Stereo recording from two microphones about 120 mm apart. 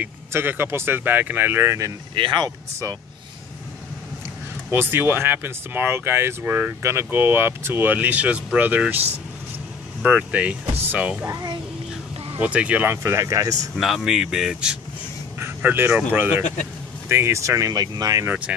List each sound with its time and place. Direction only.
0.0 s speech: 15° right (ahead or behind)
2.1 s speech: 40° right (ahead or behind)
4.6 s speech: 15° right (ahead or behind)
10.0 s speech: 10° right (ahead or behind)
12.4 s speech: 10° right (ahead or behind); by 13.7 s 30° right (ahead or behind)
13.7 s speech: centre (ahead or behind)
15.3 s speech: 20° right (ahead or behind)
18.2 s speech: 10° right (ahead or behind)